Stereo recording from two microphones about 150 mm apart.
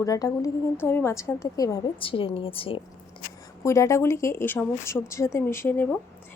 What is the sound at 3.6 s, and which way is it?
A woman's voice, 20° left (ahead or behind).